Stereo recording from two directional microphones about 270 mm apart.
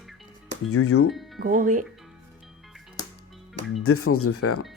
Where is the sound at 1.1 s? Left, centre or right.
Centre.